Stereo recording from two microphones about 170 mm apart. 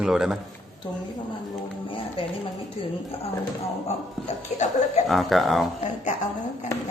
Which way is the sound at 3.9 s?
40° left (ahead or behind).